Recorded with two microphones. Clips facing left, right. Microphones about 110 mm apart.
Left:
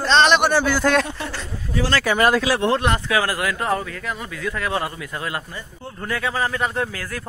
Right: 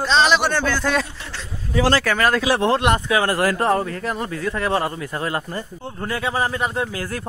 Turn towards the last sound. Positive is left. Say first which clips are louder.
# right 1 dB
turn(degrees=-30)  # may be behind; listen again after turning